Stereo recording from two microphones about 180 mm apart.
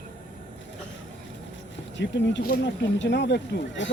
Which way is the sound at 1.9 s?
80° left.